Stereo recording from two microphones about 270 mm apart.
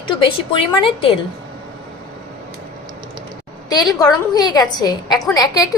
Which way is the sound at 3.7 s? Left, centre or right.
Centre.